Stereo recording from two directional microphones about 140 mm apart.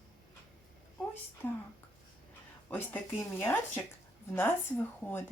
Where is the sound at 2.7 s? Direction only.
15° left (ahead or behind).